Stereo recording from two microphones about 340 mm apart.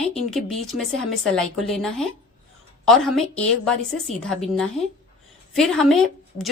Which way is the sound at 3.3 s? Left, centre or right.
Centre.